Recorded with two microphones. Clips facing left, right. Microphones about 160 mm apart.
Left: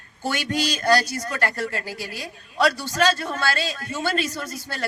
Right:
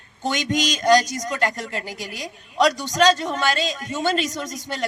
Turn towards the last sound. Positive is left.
turn(degrees=-20)  # may be behind; listen again after turning